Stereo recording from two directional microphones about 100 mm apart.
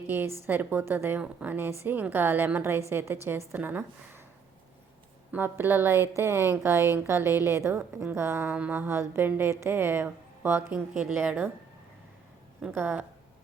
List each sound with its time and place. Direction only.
0.1 s a woman's voice: 20° right (ahead or behind)
5.3 s a woman's voice: 20° right (ahead or behind)
12.7 s a woman's voice: 20° right (ahead or behind)